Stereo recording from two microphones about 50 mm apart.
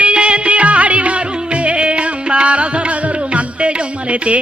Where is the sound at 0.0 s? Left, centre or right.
Right.